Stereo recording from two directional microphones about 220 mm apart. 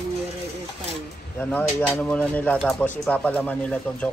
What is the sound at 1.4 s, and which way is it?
Speech, 5° left (ahead or behind).